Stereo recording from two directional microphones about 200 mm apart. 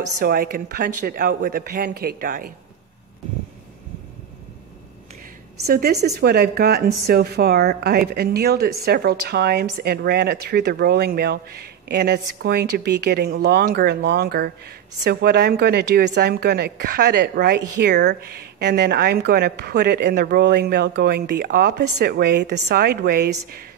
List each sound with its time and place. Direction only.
0.2 s a woman's voice: 45° right (ahead or behind)
5.7 s a woman's voice: 50° right (ahead or behind)